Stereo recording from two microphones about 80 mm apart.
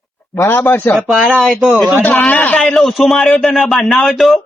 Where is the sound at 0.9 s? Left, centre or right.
Centre.